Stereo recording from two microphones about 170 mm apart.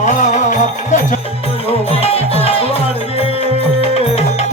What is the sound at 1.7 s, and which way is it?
Music, 35° left (ahead or behind).